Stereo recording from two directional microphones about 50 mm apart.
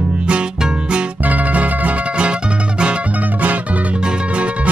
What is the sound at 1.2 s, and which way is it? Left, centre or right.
Music, right.